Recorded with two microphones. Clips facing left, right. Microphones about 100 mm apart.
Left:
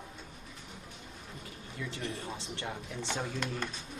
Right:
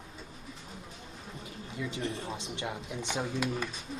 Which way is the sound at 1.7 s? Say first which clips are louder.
Right 4 dB; 20° right (ahead or behind).